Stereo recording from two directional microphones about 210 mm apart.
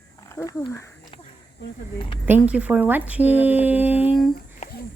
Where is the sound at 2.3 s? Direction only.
5° right (ahead or behind).